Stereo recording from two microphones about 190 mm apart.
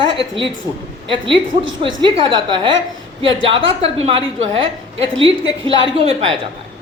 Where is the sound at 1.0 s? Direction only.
25° right (ahead or behind).